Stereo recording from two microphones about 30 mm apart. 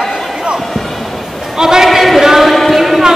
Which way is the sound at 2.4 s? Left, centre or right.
Centre.